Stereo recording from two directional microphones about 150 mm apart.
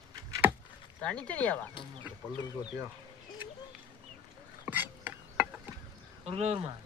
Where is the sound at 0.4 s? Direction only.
10° right (ahead or behind).